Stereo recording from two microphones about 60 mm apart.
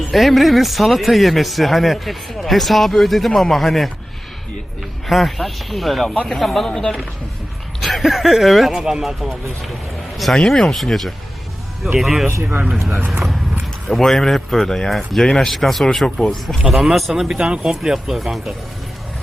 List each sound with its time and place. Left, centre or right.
0.1 s speech: centre
5.0 s speech: centre
12.4 s speech: right
13.8 s speech: centre